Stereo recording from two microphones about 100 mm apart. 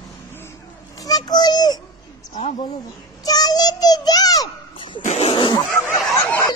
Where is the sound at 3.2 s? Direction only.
40° left (ahead or behind).